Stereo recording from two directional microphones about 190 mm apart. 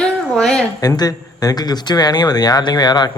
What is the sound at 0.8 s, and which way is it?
Speech, 20° left (ahead or behind).